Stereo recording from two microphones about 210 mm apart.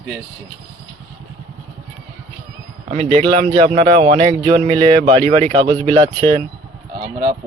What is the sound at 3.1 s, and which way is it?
Speech, 30° right (ahead or behind).